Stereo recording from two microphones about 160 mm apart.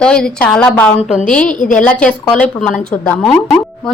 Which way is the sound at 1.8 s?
10° left (ahead or behind).